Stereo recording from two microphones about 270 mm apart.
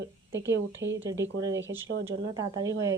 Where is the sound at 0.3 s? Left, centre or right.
Right.